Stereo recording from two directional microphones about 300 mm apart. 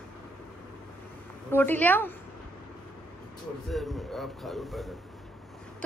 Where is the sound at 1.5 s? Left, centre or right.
Centre.